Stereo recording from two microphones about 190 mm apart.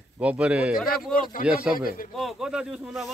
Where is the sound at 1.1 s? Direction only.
45° left (ahead or behind).